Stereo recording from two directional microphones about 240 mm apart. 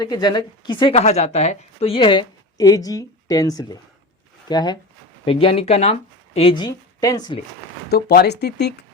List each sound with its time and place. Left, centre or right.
0.0 s a woman's voice: centre
7.9 s speech: left